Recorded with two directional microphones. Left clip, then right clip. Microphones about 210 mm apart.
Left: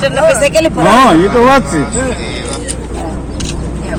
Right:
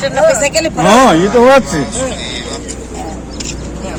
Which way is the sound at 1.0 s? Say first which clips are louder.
Even; 50° right (ahead or behind).